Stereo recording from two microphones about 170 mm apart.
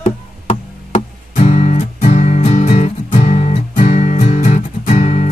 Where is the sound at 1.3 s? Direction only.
45° left (ahead or behind).